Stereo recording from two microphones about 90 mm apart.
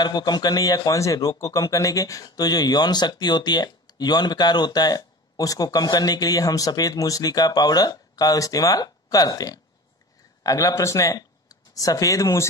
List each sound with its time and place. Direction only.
0.0 s speech: 50° left (ahead or behind); by 12.4 s 35° left (ahead or behind)